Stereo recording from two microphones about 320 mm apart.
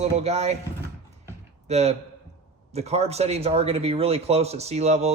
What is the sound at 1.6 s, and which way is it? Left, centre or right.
Speech, centre.